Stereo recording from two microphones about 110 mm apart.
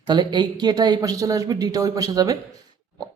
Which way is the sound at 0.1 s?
45° right (ahead or behind).